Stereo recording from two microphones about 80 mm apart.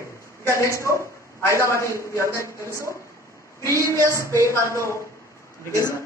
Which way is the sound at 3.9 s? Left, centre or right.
Right.